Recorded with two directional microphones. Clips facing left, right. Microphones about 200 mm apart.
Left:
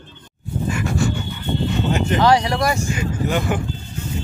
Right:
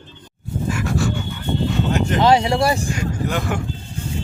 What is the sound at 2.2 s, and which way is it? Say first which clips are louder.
Speech: right 2 dB; 25° right (ahead or behind).